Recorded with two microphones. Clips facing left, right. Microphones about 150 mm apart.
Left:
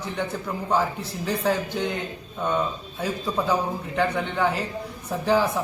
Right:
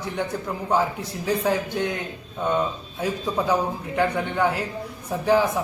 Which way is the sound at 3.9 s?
5° right (ahead or behind).